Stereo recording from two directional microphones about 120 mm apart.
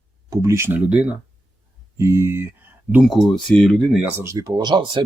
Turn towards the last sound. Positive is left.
turn(degrees=-40)  # may be behind; listen again after turning